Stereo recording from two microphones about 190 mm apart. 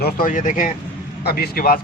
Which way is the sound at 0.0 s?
45° left (ahead or behind).